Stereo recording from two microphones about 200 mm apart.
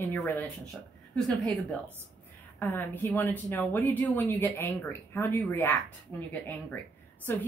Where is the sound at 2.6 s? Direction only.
10° left (ahead or behind).